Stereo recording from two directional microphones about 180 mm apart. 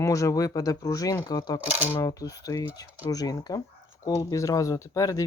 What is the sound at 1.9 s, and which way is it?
Speech, 20° left (ahead or behind).